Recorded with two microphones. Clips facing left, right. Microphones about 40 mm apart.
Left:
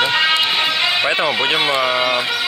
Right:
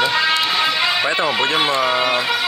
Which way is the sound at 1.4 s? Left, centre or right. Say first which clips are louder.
Left 1 dB; centre.